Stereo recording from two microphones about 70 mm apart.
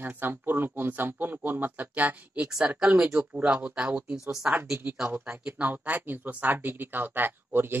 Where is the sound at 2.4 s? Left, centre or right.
Centre.